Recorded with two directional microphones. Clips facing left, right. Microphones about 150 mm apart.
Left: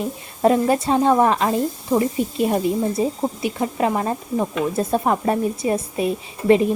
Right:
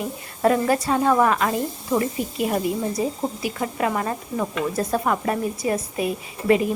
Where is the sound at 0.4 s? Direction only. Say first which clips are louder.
Left 3 dB; 25° left (ahead or behind).